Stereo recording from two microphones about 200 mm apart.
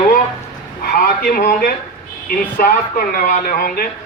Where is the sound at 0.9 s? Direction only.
50° left (ahead or behind).